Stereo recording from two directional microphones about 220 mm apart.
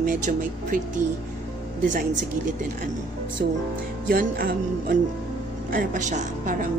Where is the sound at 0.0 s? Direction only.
40° right (ahead or behind).